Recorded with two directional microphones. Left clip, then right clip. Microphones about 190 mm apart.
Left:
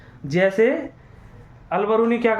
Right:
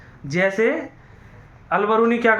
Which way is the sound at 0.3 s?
30° left (ahead or behind).